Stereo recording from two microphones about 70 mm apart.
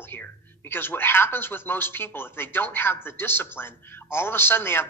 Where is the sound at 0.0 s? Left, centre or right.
Left.